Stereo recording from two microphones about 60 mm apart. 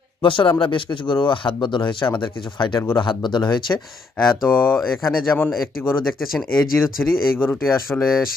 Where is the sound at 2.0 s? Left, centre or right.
Left.